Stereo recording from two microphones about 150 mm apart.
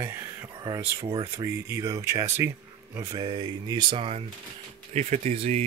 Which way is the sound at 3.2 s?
30° right (ahead or behind).